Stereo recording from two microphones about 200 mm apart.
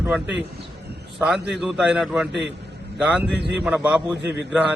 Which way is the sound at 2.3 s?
60° right (ahead or behind).